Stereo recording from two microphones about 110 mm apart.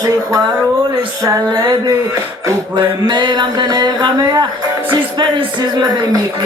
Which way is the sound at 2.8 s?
45° right (ahead or behind).